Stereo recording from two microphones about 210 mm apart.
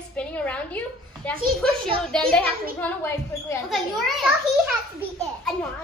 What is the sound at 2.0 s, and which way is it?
Speech, 5° left (ahead or behind).